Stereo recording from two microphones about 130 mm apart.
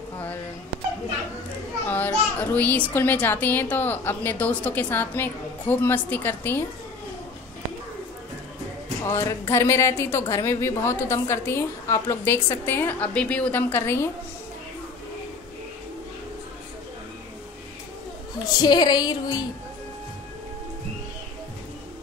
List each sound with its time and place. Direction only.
1.9 s a child's voice: 15° left (ahead or behind)
9.0 s a woman's voice: 20° left (ahead or behind)
18.6 s female singing: 30° left (ahead or behind)